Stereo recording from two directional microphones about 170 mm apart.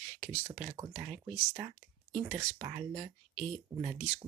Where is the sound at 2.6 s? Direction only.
5° right (ahead or behind).